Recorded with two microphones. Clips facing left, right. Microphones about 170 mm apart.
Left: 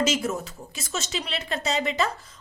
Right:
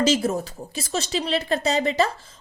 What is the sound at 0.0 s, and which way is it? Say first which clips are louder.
Speech: right 4 dB; 35° right (ahead or behind).